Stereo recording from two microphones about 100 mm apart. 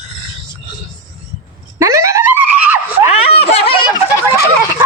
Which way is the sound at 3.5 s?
80° left.